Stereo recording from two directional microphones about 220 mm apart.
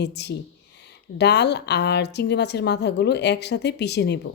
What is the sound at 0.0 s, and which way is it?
A woman's voice, 50° left (ahead or behind).